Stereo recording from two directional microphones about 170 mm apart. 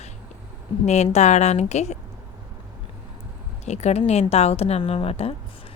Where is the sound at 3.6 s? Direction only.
40° left (ahead or behind).